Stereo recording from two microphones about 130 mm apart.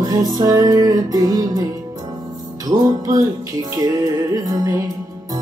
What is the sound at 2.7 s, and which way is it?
Music, 25° right (ahead or behind).